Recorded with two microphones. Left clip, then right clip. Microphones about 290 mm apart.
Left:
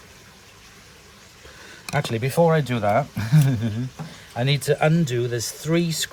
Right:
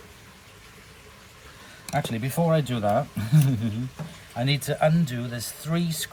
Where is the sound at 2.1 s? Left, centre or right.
Left.